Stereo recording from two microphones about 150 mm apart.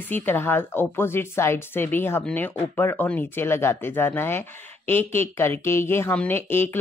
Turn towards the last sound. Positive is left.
turn(degrees=15)  # may be behind; listen again after turning